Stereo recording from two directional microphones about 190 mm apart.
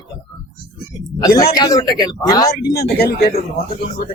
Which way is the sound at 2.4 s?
55° left (ahead or behind).